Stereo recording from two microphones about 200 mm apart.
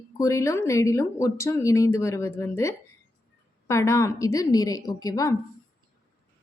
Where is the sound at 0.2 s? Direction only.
15° left (ahead or behind).